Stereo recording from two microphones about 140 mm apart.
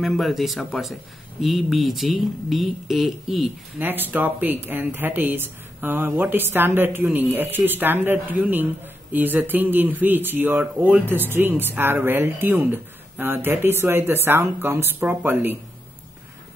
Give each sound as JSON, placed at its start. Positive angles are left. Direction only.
{"t": 0.0, "sound": "speech", "side_deg": 0}
{"t": 3.7, "sound": "speech", "side_deg": -15}